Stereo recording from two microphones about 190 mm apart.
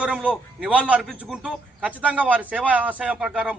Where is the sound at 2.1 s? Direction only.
5° right (ahead or behind).